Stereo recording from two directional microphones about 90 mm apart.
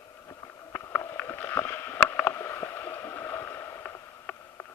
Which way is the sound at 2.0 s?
25° left (ahead or behind).